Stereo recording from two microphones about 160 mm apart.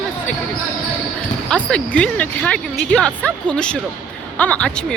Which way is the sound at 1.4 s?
5° left (ahead or behind).